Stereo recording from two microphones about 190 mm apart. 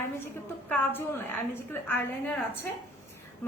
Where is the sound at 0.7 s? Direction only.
10° left (ahead or behind).